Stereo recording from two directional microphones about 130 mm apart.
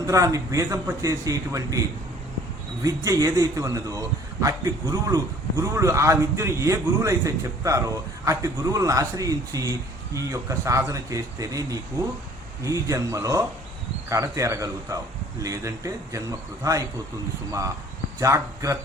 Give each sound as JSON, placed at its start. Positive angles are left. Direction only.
{"t": 0.0, "sound": "a man's voice", "side_deg": -25}
{"t": 2.8, "sound": "a man's voice", "side_deg": -25}
{"t": 18.2, "sound": "a man's voice", "side_deg": -25}